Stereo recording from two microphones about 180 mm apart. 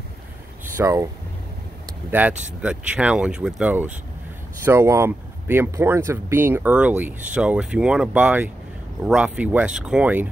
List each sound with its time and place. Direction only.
0.7 s speech: 15° right (ahead or behind)
2.0 s speech: 10° right (ahead or behind)